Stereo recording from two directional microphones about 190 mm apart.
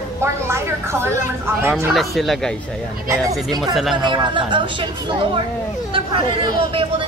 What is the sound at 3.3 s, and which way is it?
Speech, 20° right (ahead or behind).